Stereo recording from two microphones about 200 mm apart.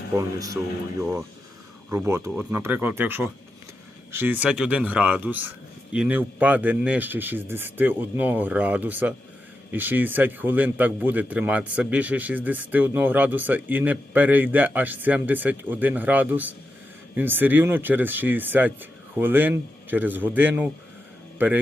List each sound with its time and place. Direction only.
0.2 s a man's voice: 15° right (ahead or behind)